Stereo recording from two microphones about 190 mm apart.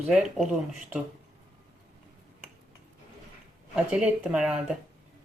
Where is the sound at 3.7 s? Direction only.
5° right (ahead or behind).